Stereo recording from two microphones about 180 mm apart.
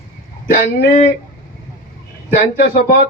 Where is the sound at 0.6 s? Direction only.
60° left (ahead or behind).